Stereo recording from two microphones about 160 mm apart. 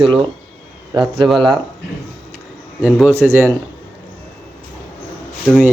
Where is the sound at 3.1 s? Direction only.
15° right (ahead or behind).